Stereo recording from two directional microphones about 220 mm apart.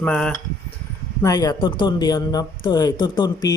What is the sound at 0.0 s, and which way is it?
Speech, 5° left (ahead or behind).